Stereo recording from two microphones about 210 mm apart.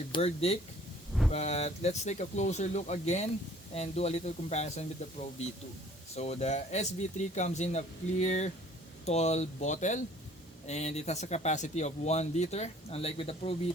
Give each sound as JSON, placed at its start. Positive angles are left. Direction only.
{"t": 0.1, "sound": "speech", "side_deg": 30}